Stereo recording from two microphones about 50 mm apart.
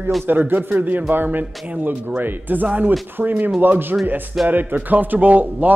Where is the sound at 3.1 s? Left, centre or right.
Right.